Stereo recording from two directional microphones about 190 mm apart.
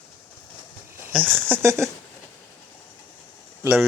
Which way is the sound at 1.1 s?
10° right (ahead or behind).